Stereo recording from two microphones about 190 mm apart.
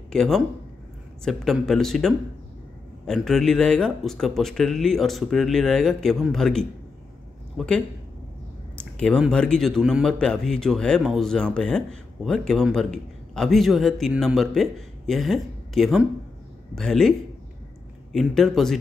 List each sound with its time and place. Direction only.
0.1 s a man's voice: 5° left (ahead or behind)
18.1 s a man's voice: centre (ahead or behind)